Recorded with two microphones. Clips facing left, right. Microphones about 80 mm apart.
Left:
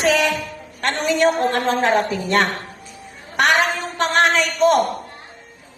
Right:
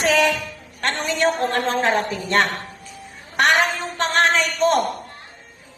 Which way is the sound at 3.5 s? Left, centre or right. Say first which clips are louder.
Left 1 dB; right.